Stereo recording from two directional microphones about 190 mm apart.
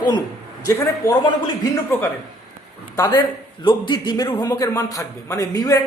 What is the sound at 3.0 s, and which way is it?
A man's voice, 15° left (ahead or behind).